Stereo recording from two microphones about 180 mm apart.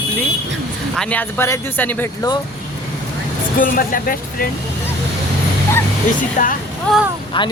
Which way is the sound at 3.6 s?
50° left (ahead or behind).